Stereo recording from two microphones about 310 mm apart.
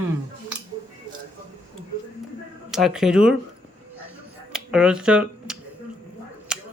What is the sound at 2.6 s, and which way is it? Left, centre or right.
Speech, centre.